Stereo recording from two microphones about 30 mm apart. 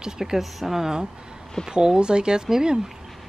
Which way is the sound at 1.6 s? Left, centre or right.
Right.